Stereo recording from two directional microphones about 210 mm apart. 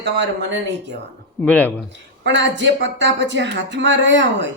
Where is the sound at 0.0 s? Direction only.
55° right (ahead or behind).